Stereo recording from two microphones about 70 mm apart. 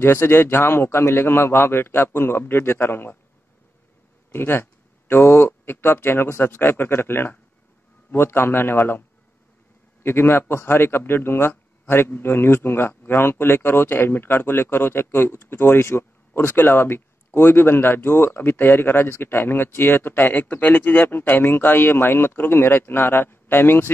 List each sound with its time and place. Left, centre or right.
0.0 s a man's voice: left
4.3 s a man's voice: left
10.0 s a man's voice: left